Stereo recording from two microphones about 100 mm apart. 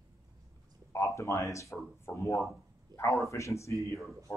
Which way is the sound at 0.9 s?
30° left (ahead or behind).